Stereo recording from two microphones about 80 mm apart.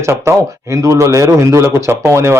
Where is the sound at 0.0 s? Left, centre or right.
Right.